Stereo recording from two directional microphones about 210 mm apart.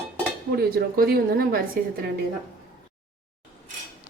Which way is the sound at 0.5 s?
45° right (ahead or behind).